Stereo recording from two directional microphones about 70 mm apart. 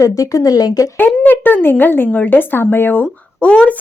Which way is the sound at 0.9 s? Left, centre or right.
Left.